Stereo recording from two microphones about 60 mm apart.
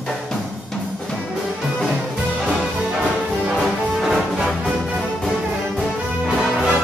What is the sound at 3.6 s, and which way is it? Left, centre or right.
Music, centre.